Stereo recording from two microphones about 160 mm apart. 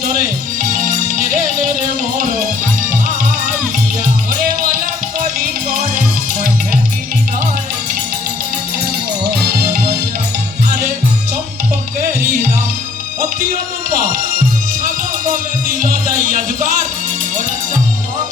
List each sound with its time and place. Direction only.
15.8 s music: 60° right (ahead or behind)